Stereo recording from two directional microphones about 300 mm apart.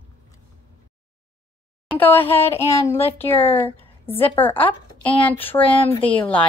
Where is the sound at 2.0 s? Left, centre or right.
Centre.